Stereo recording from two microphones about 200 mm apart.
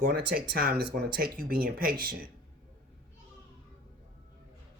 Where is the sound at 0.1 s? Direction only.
50° right (ahead or behind).